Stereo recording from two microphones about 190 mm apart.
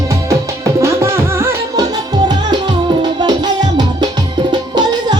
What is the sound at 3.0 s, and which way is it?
Music, 20° right (ahead or behind).